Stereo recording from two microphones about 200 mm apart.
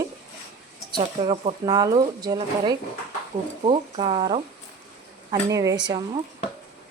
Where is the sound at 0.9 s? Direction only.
25° right (ahead or behind).